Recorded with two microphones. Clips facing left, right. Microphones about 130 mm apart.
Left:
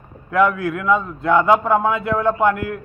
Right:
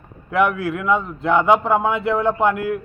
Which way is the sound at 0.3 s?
30° right (ahead or behind).